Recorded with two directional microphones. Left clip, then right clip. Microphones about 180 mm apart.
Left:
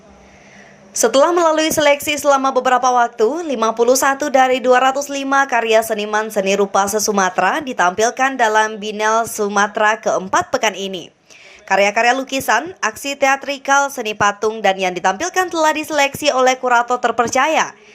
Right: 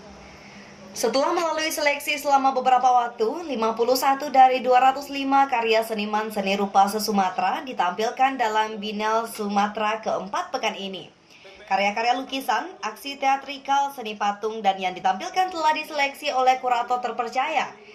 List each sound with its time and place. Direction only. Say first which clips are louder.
1.1 s a woman's voice: left 11 dB; 50° left (ahead or behind)